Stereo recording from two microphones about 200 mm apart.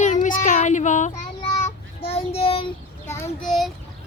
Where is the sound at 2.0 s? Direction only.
30° left (ahead or behind).